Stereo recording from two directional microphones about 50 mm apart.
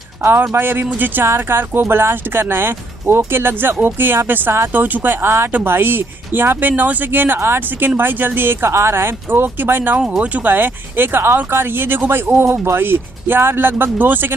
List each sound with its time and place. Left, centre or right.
0.2 s speech: right
1.2 s speech: right
7.3 s speech: right
10.0 s speech: right
10.4 s speech: right
12.4 s speech: right
12.8 s speech: right